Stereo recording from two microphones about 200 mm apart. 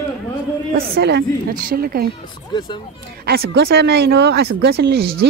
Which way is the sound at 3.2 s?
50° right (ahead or behind).